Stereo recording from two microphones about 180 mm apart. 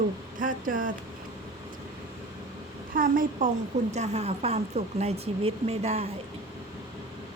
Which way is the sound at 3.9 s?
40° right (ahead or behind).